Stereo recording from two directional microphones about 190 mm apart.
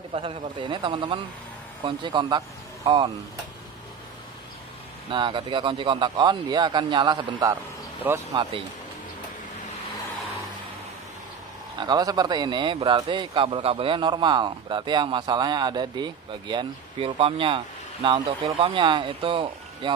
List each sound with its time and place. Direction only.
0.1 s a man's voice: 30° right (ahead or behind)
5.1 s a man's voice: 25° right (ahead or behind)
11.8 s a man's voice: 20° right (ahead or behind)